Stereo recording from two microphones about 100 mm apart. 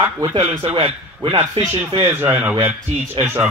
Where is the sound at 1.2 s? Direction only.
65° right (ahead or behind).